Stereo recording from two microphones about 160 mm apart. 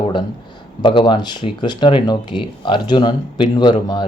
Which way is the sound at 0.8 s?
30° left (ahead or behind).